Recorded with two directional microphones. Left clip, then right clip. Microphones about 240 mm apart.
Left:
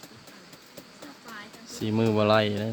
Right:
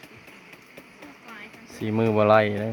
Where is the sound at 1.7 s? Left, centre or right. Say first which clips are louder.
Right 2 dB; centre.